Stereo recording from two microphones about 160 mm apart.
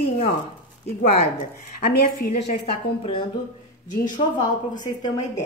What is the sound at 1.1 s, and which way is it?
A woman's voice, 50° left (ahead or behind).